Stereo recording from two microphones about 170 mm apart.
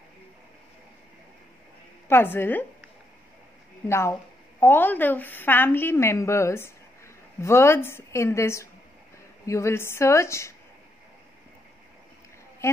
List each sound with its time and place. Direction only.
2.0 s a woman's voice: 15° left (ahead or behind)
3.8 s a woman's voice: 15° left (ahead or behind)